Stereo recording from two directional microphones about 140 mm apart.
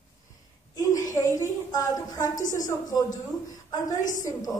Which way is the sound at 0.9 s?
25° left (ahead or behind).